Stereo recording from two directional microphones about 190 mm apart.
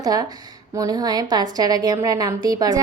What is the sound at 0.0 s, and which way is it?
A woman's voice, 20° right (ahead or behind).